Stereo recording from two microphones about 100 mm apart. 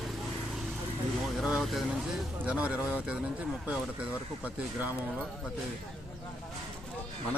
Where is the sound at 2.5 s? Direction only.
10° right (ahead or behind).